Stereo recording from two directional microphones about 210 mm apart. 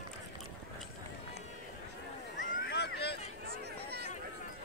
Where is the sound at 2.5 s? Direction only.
50° left (ahead or behind).